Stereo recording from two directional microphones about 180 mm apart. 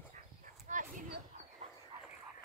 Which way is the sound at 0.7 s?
45° right (ahead or behind).